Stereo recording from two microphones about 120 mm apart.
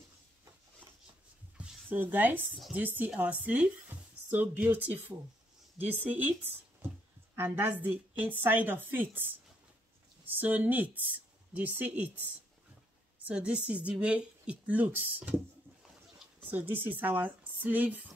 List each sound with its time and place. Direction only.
1.6 s speech: 15° right (ahead or behind)
7.3 s speech: 15° right (ahead or behind)
13.3 s speech: 10° right (ahead or behind)
16.4 s speech: 15° right (ahead or behind)